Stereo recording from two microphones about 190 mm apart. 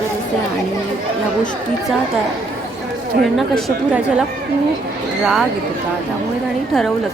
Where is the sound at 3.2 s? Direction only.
Centre (ahead or behind).